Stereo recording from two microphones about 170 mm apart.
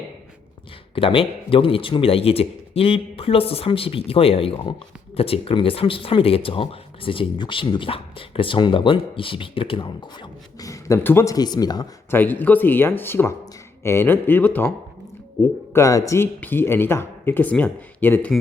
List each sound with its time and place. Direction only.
0.9 s speech: 30° left (ahead or behind)
12.1 s speech: 10° left (ahead or behind)
15.7 s speech: 20° left (ahead or behind)